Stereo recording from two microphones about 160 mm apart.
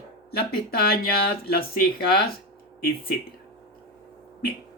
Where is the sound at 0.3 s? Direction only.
70° left (ahead or behind).